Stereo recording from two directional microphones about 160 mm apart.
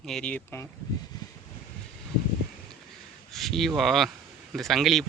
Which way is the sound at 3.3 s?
Centre (ahead or behind).